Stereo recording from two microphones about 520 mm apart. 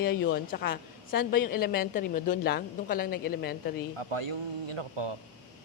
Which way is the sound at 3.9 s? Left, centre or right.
Right.